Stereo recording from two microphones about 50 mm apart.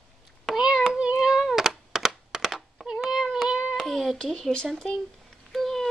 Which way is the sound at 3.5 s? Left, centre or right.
Centre.